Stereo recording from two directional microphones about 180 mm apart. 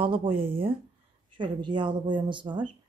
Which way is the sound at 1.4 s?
25° right (ahead or behind).